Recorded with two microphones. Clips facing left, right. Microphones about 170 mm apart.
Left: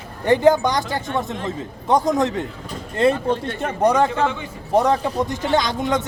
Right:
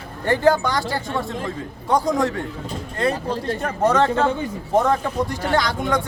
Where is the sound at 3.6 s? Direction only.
15° left (ahead or behind).